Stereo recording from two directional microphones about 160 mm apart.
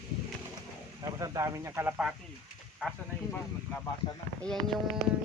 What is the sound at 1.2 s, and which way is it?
Speech, 20° right (ahead or behind).